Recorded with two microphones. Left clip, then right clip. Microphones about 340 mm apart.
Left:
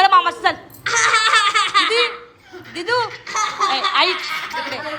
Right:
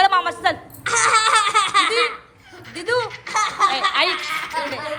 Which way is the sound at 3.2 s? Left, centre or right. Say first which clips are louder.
Right 1 dB; right.